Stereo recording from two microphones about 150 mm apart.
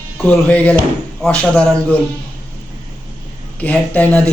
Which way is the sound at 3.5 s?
10° left (ahead or behind).